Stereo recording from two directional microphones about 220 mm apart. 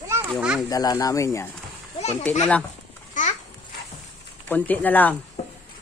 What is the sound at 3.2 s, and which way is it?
Babbling, 35° left (ahead or behind).